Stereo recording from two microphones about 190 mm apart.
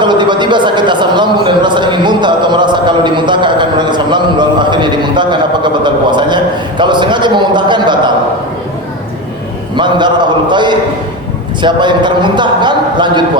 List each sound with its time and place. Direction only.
0.0 s a man's voice: 25° right (ahead or behind)
9.7 s a man's voice: 25° right (ahead or behind)